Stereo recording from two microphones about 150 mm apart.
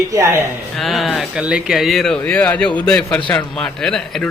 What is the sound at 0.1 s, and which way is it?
Speech, 20° right (ahead or behind).